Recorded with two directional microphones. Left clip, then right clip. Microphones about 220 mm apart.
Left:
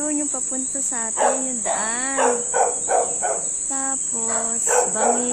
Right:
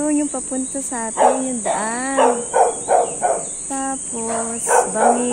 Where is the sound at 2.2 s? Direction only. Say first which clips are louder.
Right 5 dB; 35° right (ahead or behind).